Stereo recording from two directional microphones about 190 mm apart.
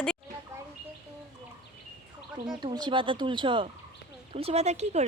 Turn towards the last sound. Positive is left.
turn(degrees=-35)  # may be behind; listen again after turning